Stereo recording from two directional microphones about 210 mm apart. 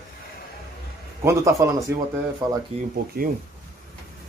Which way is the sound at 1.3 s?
15° right (ahead or behind).